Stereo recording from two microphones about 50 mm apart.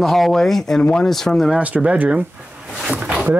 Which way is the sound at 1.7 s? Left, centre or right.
Centre.